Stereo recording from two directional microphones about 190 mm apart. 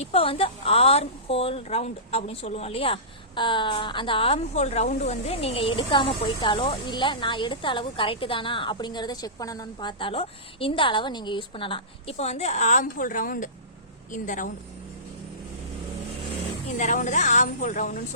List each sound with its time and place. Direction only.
0.0 s a woman's voice: 30° left (ahead or behind)
16.7 s a woman's voice: 40° left (ahead or behind)